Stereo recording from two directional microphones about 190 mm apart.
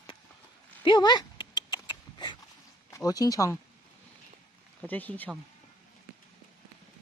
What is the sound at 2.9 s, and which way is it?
Speech, 20° left (ahead or behind).